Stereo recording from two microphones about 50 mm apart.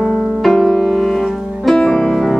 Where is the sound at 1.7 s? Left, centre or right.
Centre.